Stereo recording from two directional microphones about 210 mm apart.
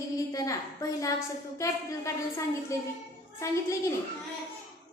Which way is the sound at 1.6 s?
15° left (ahead or behind).